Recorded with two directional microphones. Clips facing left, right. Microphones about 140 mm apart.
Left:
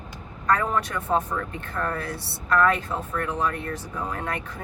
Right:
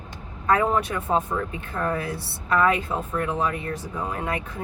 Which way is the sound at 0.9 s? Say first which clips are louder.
Right 1 dB; 10° right (ahead or behind).